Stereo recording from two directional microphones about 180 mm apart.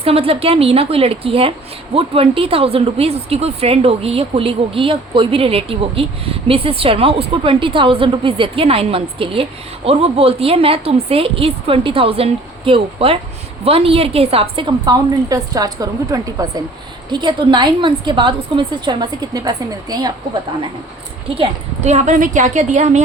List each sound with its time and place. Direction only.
0.0 s a woman's voice: 35° right (ahead or behind)
21.3 s speech: 35° right (ahead or behind)